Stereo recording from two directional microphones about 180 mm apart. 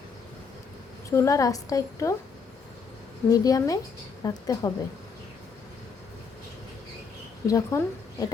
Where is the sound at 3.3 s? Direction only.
20° left (ahead or behind).